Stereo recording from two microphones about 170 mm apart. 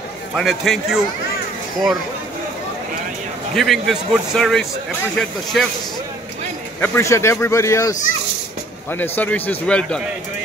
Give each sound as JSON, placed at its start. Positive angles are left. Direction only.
{"t": 0.4, "sound": "speech", "side_deg": 0}
{"t": 3.5, "sound": "speech", "side_deg": 0}
{"t": 6.8, "sound": "speech", "side_deg": 15}